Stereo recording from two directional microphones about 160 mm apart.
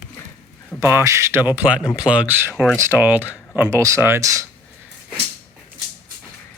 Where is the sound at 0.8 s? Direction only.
15° right (ahead or behind).